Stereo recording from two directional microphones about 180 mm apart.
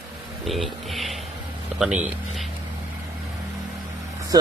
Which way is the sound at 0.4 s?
Centre (ahead or behind).